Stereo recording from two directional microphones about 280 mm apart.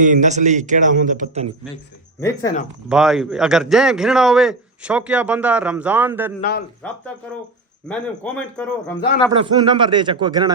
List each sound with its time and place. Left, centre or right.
0.0 s a man's voice: right
2.9 s speech: centre
6.4 s speech: left
7.9 s speech: centre
9.3 s speech: centre